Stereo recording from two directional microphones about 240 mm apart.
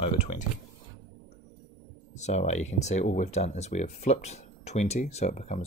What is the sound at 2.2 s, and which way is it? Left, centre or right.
Speech, left.